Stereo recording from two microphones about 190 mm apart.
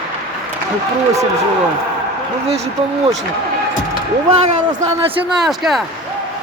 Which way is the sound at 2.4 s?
35° right (ahead or behind).